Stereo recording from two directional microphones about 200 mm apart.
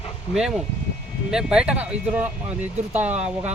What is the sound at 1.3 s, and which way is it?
Speech, 5° right (ahead or behind).